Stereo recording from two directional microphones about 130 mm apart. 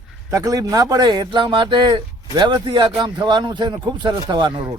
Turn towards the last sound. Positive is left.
turn(degrees=-35)  # may be behind; listen again after turning